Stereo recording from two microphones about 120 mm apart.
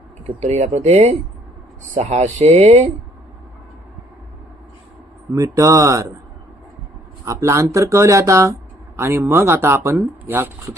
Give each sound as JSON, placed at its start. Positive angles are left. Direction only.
{"t": 0.4, "sound": "speech", "side_deg": -65}
{"t": 5.3, "sound": "speech", "side_deg": -25}
{"t": 7.3, "sound": "speech", "side_deg": -25}